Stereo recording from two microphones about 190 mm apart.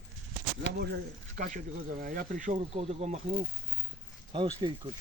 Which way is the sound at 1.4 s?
45° right (ahead or behind).